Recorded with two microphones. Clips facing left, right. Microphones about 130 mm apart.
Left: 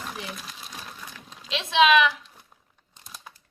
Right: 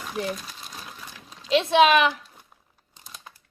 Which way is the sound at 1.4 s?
40° right (ahead or behind).